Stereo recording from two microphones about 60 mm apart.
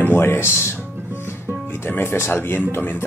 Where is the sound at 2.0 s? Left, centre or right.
Left.